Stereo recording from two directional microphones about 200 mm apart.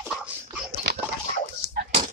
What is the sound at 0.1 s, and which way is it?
Dog, 5° right (ahead or behind).